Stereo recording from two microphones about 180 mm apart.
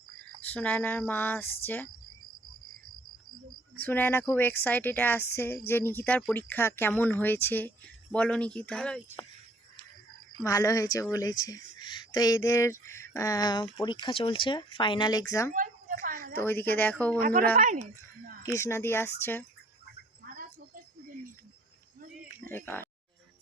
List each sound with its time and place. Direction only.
0.4 s speech: 10° left (ahead or behind)
3.8 s speech: 10° left (ahead or behind)
10.4 s speech: 15° left (ahead or behind)
15.5 s a sound: 50° right (ahead or behind)
16.4 s speech: 10° left (ahead or behind)
17.2 s a woman's voice: 55° right (ahead or behind)
18.4 s speech: 15° left (ahead or behind)
22.4 s speech: 10° left (ahead or behind)